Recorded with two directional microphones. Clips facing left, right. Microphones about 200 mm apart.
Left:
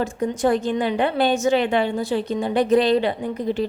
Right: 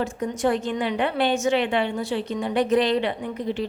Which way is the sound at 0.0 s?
40° left (ahead or behind).